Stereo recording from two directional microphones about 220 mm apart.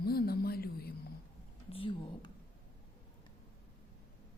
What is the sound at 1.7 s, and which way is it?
Speech, 25° left (ahead or behind).